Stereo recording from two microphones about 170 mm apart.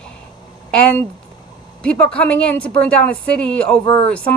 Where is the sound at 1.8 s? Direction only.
5° left (ahead or behind).